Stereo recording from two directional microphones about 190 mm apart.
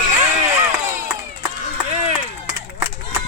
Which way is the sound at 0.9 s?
15° right (ahead or behind).